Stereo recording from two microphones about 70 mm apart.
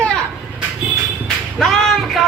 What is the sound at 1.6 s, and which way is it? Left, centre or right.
Speech, centre.